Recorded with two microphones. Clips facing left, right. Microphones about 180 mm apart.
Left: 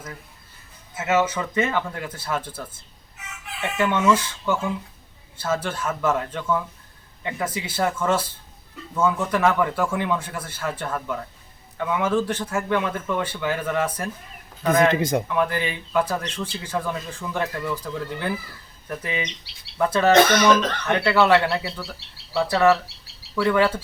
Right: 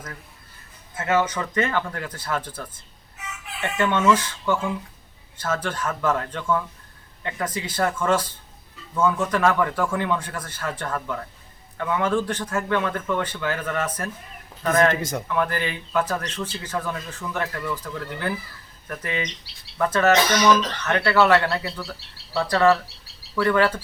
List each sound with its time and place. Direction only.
0.9 s speech: 10° left (ahead or behind)
20.1 s speech: 55° left (ahead or behind)
20.8 s speech: 15° left (ahead or behind)